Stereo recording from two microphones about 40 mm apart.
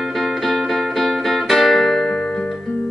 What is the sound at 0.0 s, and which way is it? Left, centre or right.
Music, centre.